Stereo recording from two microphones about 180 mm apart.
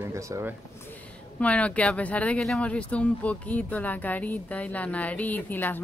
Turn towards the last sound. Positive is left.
turn(degrees=10)  # may be behind; listen again after turning